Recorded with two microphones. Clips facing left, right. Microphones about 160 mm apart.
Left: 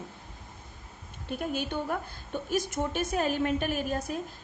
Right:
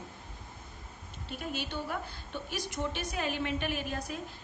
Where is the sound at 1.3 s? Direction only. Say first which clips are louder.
Left 6 dB; 50° left (ahead or behind).